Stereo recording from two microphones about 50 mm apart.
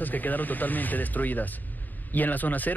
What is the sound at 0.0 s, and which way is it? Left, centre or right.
Speech, left.